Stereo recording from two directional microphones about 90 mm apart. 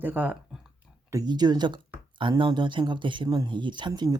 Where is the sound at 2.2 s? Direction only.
65° right (ahead or behind).